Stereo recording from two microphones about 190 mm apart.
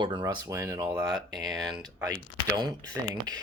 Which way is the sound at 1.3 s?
Centre (ahead or behind).